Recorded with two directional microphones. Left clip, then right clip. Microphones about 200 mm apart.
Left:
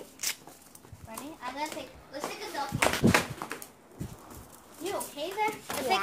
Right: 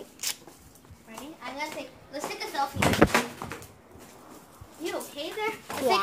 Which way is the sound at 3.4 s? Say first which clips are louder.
Even; 45° left (ahead or behind).